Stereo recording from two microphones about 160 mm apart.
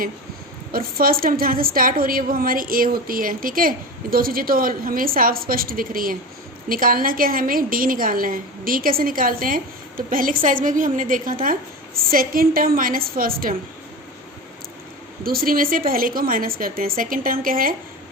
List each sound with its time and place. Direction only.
0.7 s a woman's voice: 70° right (ahead or behind)
15.2 s a woman's voice: 65° right (ahead or behind)